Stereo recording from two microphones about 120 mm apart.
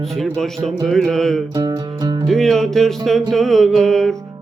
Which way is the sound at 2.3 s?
5° left (ahead or behind).